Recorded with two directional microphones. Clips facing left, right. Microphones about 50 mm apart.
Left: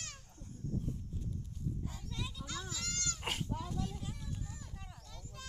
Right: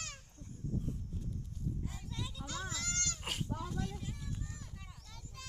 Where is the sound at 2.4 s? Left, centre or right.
Right.